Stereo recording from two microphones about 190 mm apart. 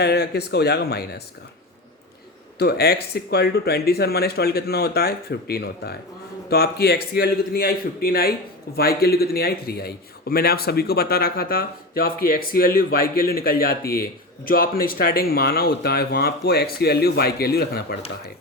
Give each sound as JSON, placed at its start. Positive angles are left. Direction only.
{"t": 0.0, "sound": "speech", "side_deg": 60}
{"t": 2.6, "sound": "a man's voice", "side_deg": 55}